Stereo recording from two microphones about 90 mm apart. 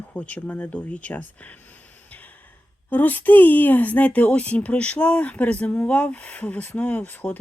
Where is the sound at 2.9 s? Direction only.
20° left (ahead or behind).